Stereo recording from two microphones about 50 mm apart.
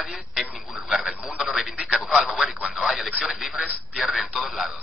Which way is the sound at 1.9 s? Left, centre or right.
Centre.